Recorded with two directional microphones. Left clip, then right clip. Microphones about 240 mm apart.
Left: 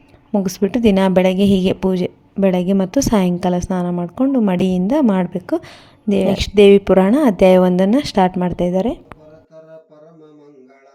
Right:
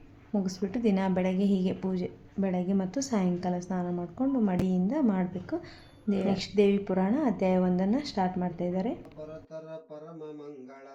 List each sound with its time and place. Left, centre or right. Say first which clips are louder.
0.3 s a woman's voice: left 14 dB; left